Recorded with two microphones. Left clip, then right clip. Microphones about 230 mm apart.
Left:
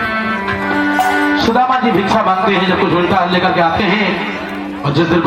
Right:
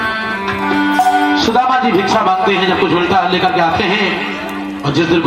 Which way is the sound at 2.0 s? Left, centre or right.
Right.